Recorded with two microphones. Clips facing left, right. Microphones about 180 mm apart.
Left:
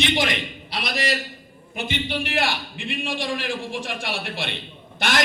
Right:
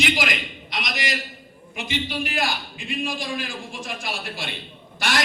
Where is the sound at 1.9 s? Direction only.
60° left (ahead or behind).